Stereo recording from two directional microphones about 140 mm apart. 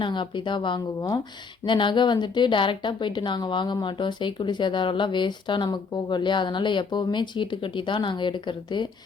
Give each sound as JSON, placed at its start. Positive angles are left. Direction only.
{"t": 0.0, "sound": "a woman's voice", "side_deg": 35}